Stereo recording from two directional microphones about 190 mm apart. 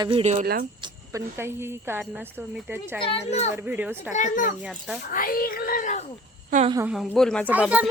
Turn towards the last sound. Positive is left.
turn(degrees=-5)  # may be behind; listen again after turning